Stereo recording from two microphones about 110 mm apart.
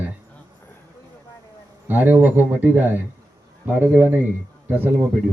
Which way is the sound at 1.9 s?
15° right (ahead or behind).